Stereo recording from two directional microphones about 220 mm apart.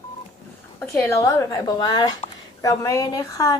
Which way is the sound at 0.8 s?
10° left (ahead or behind).